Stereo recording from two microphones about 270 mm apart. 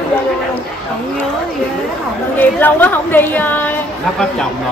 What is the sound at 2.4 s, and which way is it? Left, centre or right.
A woman's voice, centre.